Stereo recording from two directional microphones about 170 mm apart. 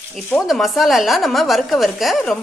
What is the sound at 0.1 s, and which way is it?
Speech, centre (ahead or behind).